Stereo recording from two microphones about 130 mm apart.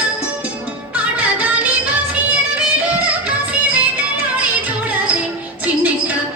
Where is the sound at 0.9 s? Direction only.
10° right (ahead or behind).